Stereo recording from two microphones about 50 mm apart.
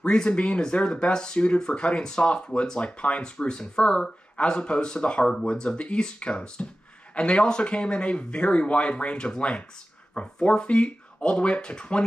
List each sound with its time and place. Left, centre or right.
0.0 s speech: centre